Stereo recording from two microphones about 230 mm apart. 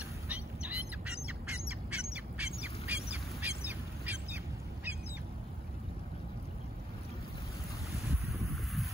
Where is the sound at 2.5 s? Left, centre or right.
Left.